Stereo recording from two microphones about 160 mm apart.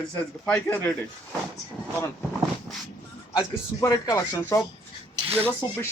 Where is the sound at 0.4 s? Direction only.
10° left (ahead or behind).